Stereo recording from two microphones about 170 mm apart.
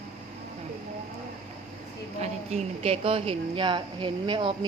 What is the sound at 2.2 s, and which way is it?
A woman's voice, 35° right (ahead or behind).